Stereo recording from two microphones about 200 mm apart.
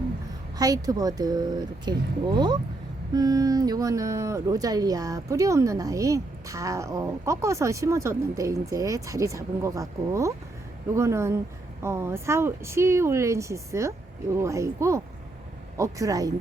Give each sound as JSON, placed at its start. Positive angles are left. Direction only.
{"t": 0.6, "sound": "speech", "side_deg": -20}